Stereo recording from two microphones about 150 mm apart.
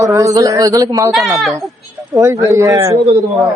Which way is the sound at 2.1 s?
20° right (ahead or behind).